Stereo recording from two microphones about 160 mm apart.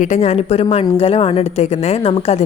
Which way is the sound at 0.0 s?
45° left (ahead or behind).